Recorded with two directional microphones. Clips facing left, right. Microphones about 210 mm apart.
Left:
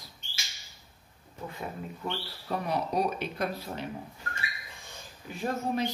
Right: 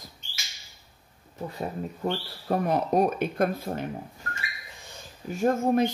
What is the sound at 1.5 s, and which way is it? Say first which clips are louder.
Speech: right 5 dB; 35° right (ahead or behind).